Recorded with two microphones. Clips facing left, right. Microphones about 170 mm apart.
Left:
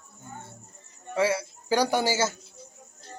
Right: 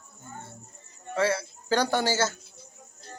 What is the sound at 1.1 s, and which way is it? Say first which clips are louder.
A man's voice: left 1 dB; 15° left (ahead or behind).